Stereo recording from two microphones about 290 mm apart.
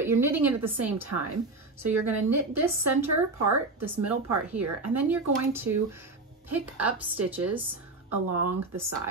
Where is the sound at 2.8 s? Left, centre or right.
Right.